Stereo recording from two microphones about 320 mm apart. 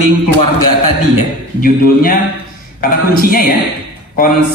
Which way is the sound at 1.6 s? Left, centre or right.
Left.